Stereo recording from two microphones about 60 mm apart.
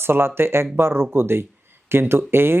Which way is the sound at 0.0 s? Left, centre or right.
Right.